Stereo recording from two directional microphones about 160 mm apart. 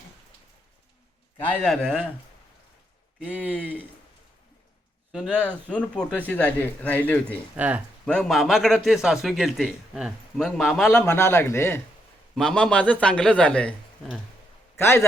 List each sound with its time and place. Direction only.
1.4 s a man's voice: 10° left (ahead or behind)
5.1 s speech: 5° left (ahead or behind)
7.5 s speech: 10° right (ahead or behind)
8.0 s a man's voice: 5° left (ahead or behind)
10.9 s speech: 15° left (ahead or behind)
12.3 s speech: 5° left (ahead or behind)
14.8 s speech: 15° left (ahead or behind)